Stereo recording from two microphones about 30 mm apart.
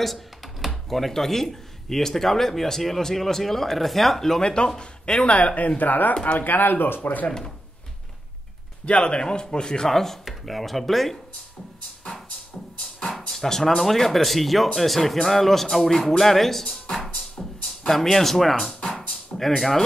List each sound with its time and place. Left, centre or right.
0.0 s computer keyboard: centre
0.7 s speech: centre
4.4 s a man's voice: left
5.8 s speech: left
6.3 s speech: left
8.8 s a man's voice: left
9.8 s speech: centre
13.1 s speech: centre
17.4 s music: centre
17.8 s speech: centre